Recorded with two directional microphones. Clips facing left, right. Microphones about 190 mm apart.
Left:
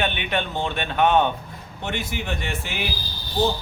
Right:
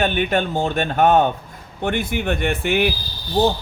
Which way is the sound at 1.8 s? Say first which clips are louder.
Right 7 dB; 55° right (ahead or behind).